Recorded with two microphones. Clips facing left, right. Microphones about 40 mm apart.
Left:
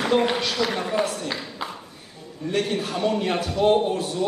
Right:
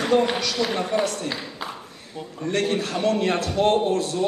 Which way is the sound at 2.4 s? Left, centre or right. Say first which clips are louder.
Right 1 dB; centre.